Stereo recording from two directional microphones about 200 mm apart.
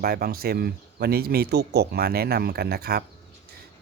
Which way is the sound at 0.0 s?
50° right (ahead or behind).